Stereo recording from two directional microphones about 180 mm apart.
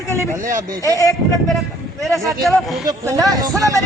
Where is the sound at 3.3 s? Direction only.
20° right (ahead or behind).